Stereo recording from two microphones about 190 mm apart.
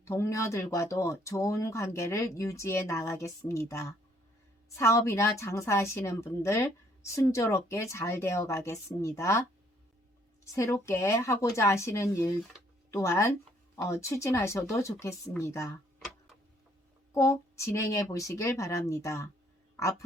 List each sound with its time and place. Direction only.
0.0 s a woman's voice: 15° left (ahead or behind)
10.4 s a woman's voice: 15° left (ahead or behind)
17.2 s a woman's voice: 15° left (ahead or behind)